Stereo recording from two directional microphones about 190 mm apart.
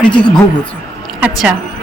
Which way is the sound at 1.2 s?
5° right (ahead or behind).